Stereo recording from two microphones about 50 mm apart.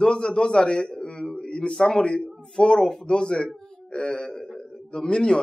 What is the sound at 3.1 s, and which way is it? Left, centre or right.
A man's voice, centre.